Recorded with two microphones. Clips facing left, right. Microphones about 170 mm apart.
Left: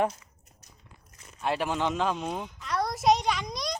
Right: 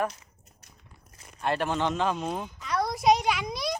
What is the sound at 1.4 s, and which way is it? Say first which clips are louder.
A child's voice: right 1 dB; 5° left (ahead or behind).